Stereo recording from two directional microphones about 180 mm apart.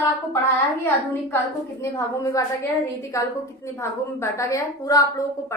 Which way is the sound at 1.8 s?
20° left (ahead or behind).